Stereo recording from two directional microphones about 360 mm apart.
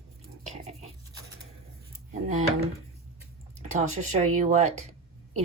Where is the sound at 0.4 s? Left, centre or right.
Centre.